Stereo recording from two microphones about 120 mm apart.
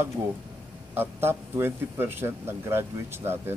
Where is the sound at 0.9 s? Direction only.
20° right (ahead or behind).